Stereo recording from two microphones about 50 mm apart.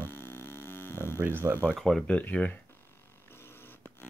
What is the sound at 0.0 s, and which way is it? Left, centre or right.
Mains hum, left.